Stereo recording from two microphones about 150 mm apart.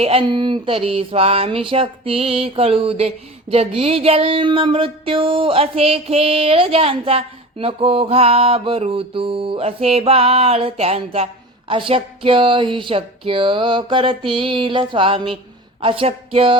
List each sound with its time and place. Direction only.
0.0 s speech: 40° right (ahead or behind)